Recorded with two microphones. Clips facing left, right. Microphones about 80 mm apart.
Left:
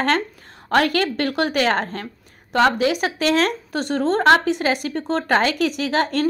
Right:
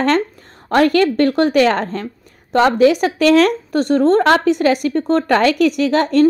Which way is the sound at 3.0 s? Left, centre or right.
Right.